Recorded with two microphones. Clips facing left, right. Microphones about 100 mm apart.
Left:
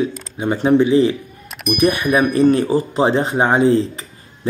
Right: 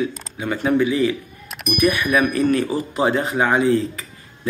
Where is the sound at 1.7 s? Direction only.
30° left (ahead or behind).